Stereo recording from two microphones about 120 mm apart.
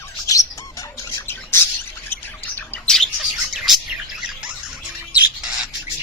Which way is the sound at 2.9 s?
Centre (ahead or behind).